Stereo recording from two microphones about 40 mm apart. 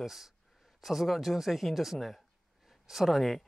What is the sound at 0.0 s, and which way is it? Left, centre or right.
Speech, centre.